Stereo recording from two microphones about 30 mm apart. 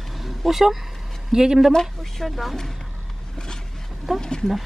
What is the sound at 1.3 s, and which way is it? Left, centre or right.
Speech, right.